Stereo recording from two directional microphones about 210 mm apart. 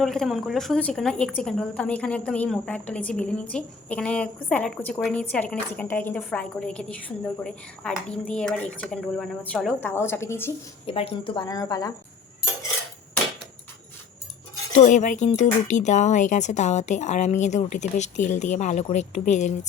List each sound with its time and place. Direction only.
0.0 s a woman's voice: centre (ahead or behind)
10.8 s speech: 25° left (ahead or behind)
14.7 s speech: 35° left (ahead or behind)